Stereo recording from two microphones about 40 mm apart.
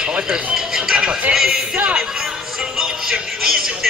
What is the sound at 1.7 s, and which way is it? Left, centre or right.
Speech, right.